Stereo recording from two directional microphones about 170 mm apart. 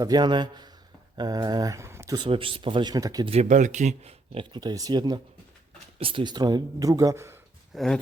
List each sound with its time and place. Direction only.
0.0 s speech: 25° right (ahead or behind)
2.1 s speech: 30° right (ahead or behind)
3.2 s speech: 40° right (ahead or behind); by 7.3 s 20° right (ahead or behind)
7.7 s speech: centre (ahead or behind)